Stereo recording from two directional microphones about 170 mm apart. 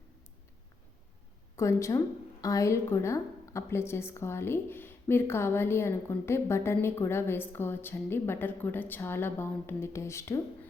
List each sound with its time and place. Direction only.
1.5 s a woman's voice: 15° left (ahead or behind)